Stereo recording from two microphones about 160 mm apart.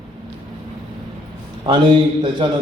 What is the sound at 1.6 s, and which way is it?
Speech, 30° right (ahead or behind).